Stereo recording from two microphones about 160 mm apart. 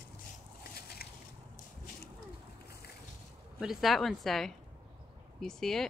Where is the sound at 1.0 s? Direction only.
75° left (ahead or behind).